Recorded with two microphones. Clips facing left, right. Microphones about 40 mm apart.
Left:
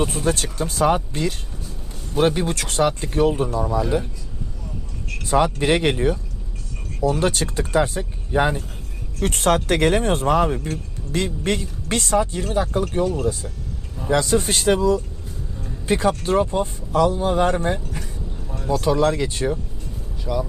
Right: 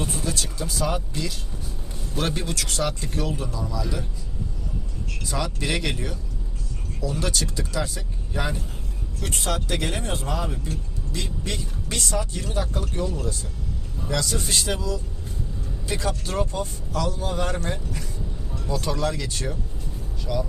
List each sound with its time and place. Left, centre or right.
0.0 s speech: left
2.1 s speech: left
5.2 s speech: left
9.2 s speech: left
18.5 s music: left
18.9 s speech: left
20.2 s speech: centre